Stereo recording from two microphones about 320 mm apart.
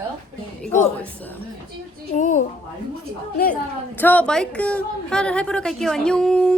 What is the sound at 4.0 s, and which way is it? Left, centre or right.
A woman's voice, centre.